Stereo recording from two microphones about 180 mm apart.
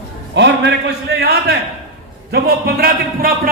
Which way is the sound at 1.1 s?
65° right (ahead or behind).